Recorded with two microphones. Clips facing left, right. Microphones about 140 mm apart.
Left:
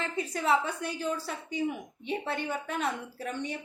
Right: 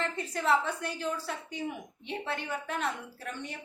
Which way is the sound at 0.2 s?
10° left (ahead or behind).